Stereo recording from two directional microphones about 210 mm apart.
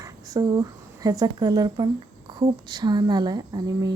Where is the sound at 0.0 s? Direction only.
15° right (ahead or behind).